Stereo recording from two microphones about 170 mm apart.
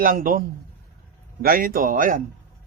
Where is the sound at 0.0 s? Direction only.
55° right (ahead or behind).